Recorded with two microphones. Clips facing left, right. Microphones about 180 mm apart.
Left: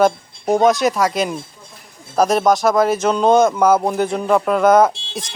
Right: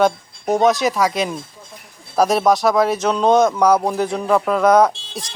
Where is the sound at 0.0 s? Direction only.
Centre (ahead or behind).